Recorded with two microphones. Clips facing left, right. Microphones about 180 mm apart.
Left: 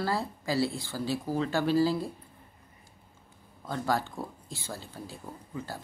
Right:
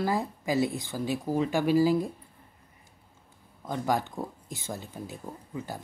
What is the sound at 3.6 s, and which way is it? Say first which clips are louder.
Speech: right 2 dB; 15° right (ahead or behind).